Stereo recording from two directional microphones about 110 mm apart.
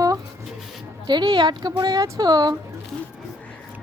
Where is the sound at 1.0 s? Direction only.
45° right (ahead or behind).